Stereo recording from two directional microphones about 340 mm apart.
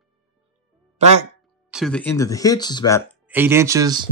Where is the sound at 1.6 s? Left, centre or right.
Centre.